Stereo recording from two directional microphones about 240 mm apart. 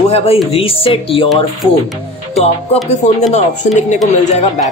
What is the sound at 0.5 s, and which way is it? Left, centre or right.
Speech, left.